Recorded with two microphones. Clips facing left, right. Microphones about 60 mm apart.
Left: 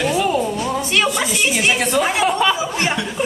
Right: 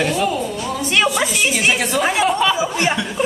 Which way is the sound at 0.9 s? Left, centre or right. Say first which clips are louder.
Right 3 dB; centre.